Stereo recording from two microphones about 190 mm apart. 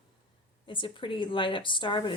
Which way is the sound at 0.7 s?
25° left (ahead or behind).